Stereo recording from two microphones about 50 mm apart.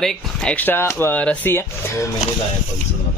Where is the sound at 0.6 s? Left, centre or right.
Left.